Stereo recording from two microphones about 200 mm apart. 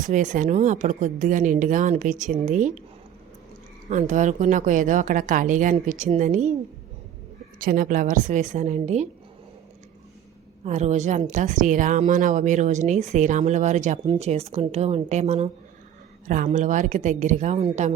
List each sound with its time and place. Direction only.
0.0 s a woman's voice: 40° right (ahead or behind)
3.8 s a woman's voice: 35° right (ahead or behind)
7.6 s a woman's voice: 45° right (ahead or behind)
10.6 s a woman's voice: 35° right (ahead or behind)